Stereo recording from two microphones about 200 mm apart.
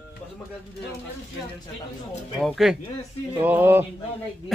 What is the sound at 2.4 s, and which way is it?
A man's voice, centre (ahead or behind).